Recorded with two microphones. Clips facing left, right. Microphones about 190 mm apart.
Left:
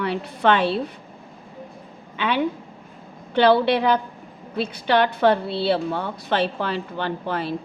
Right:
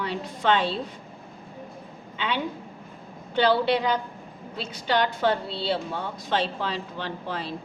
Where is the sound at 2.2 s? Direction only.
60° left (ahead or behind).